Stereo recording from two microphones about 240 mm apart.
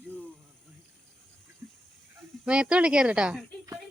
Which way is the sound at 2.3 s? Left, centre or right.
Centre.